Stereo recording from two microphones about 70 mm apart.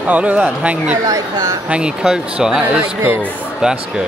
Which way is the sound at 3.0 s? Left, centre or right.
Right.